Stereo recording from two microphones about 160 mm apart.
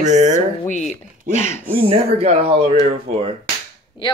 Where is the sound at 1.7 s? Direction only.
35° right (ahead or behind).